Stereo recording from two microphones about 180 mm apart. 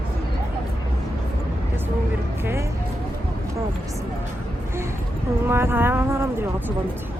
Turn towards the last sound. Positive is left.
turn(degrees=-15)  # may be behind; listen again after turning